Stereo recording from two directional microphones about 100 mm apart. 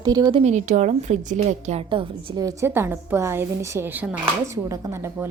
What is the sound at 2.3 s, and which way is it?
Speech, 35° right (ahead or behind).